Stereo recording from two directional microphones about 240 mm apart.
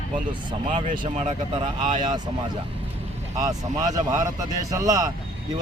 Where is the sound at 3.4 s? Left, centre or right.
Centre.